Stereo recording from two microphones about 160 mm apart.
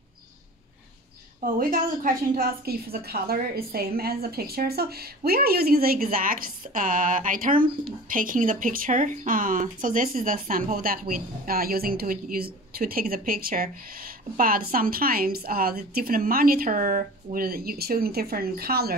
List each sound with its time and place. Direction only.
1.4 s a woman's voice: 60° right (ahead or behind)